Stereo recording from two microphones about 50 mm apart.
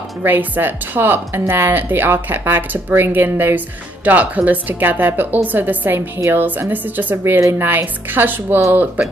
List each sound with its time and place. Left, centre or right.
0.2 s a woman's voice: right
5.9 s a woman's voice: right
6.7 s speech: right